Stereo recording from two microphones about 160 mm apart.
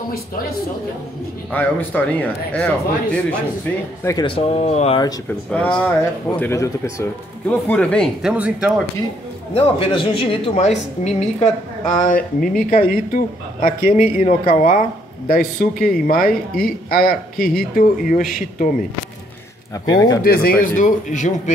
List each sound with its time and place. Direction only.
1.5 s speech: 10° left (ahead or behind)
4.0 s speech: 20° left (ahead or behind)
4.3 s a woman's voice: 35° left (ahead or behind)
5.5 s speech: 5° left (ahead or behind)
6.4 s speech: 20° left (ahead or behind)
8.2 s speech: 5° right (ahead or behind)
9.5 s a woman's voice: 35° left (ahead or behind)
12.1 s speech: 60° left (ahead or behind)
19.7 s speech: 25° left (ahead or behind)
20.2 s speech: 65° left (ahead or behind)
20.6 s speech: 55° left (ahead or behind)